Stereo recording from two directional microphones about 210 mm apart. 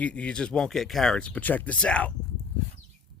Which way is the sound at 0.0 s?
5° left (ahead or behind).